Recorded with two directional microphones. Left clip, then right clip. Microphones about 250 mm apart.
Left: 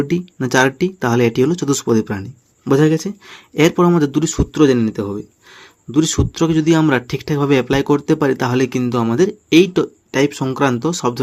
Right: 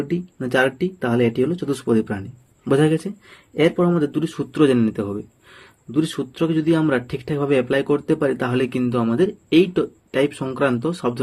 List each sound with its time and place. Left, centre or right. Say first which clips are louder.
0.0 s speech: left 5 dB; left
5.9 s speech: left 6 dB; left